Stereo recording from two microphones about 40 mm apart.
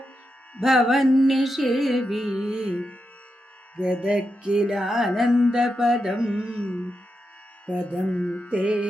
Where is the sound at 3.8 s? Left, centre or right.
Right.